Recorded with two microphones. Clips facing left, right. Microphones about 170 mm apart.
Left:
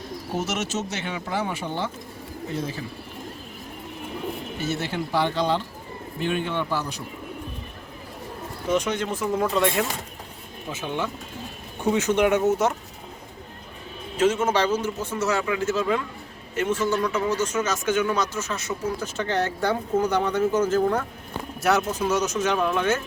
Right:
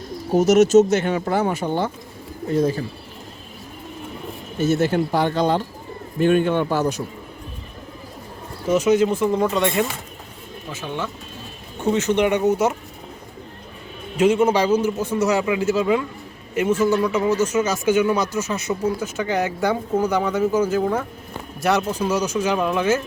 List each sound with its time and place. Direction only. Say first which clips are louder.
0.3 s speech: right 15 dB; 40° right (ahead or behind)
4.6 s speech: right 10 dB; 45° right (ahead or behind)
8.7 s speech: right 8 dB; 5° right (ahead or behind)
10.7 s speech: even; 15° left (ahead or behind); by 12.7 s centre (ahead or behind)
14.2 s speech: right 4 dB; 15° right (ahead or behind)